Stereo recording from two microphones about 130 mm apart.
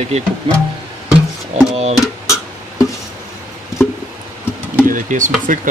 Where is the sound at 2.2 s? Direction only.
25° left (ahead or behind).